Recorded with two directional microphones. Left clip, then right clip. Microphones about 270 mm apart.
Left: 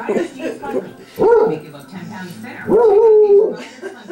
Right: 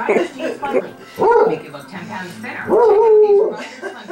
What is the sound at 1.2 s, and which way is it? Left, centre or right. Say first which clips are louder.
Dog: left 1 dB; centre.